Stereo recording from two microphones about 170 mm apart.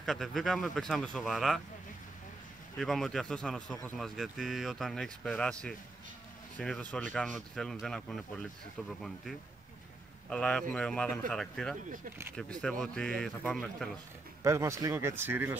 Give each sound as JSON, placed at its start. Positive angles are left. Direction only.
{"t": 0.0, "sound": "a man's voice", "side_deg": 0}
{"t": 2.8, "sound": "a man's voice", "side_deg": 0}
{"t": 10.3, "sound": "a man's voice", "side_deg": 5}
{"t": 14.4, "sound": "speech", "side_deg": -15}